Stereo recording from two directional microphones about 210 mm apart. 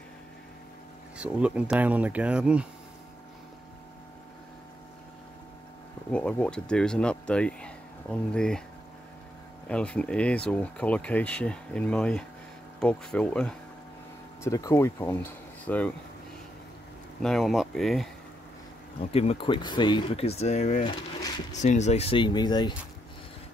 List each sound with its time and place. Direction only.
1.1 s speech: 5° right (ahead or behind)
6.1 s speech: 5° left (ahead or behind)
9.7 s speech: 5° left (ahead or behind)
14.4 s speech: 15° left (ahead or behind)
17.2 s speech: centre (ahead or behind)
18.9 s speech: 30° left (ahead or behind)